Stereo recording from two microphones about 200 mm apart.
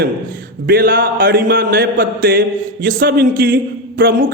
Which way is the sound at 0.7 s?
45° right (ahead or behind).